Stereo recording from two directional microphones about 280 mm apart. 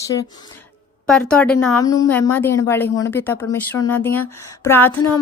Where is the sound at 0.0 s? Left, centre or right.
Centre.